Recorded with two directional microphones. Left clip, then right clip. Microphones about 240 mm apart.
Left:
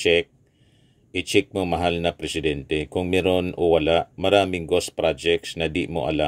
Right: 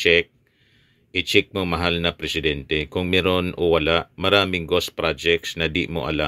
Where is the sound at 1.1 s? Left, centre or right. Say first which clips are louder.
Right 4 dB; right.